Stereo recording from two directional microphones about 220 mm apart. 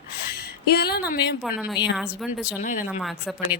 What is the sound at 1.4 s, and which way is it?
Speech, 5° right (ahead or behind).